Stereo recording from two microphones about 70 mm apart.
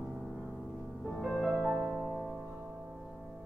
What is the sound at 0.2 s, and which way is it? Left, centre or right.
Music, centre.